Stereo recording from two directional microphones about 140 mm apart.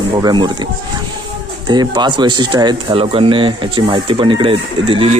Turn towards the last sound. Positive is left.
turn(degrees=-40)  # may be behind; listen again after turning